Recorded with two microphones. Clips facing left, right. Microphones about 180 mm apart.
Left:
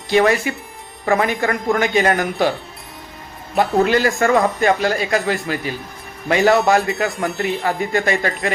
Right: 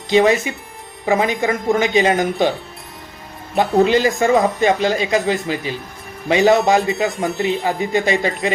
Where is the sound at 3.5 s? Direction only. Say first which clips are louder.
Right 1 dB; 20° right (ahead or behind).